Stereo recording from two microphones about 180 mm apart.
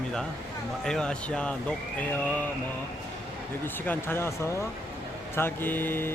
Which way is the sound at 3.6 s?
10° left (ahead or behind).